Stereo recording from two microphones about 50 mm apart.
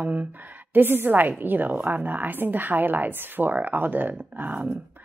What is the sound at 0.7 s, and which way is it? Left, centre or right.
A woman's voice, right.